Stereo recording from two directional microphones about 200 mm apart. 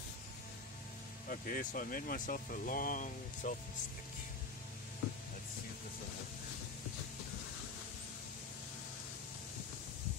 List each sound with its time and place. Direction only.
1.3 s speech: 40° left (ahead or behind)